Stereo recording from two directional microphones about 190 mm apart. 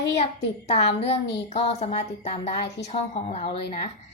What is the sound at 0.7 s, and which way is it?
A woman's voice, 35° left (ahead or behind).